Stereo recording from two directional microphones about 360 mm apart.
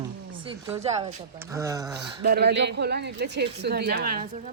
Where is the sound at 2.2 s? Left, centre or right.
Right.